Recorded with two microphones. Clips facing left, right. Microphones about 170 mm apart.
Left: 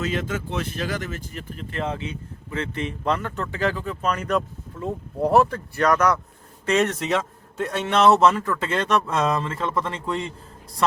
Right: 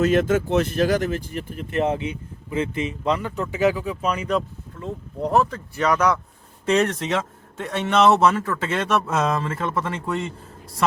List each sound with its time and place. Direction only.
0.0 s speech: 50° right (ahead or behind)
1.7 s speech: 20° right (ahead or behind); by 4.4 s 5° right (ahead or behind)
4.4 s speech: 5° left (ahead or behind)
5.8 s a man's voice: 10° right (ahead or behind)